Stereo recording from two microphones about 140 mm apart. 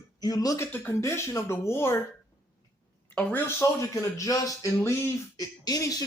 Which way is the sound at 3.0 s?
15° left (ahead or behind).